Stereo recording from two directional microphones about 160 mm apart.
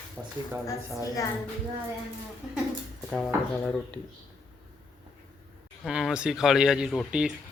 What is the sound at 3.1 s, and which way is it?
Speech, 5° left (ahead or behind).